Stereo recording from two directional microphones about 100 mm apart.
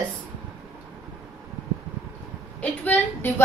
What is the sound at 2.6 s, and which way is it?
Speech, 20° left (ahead or behind).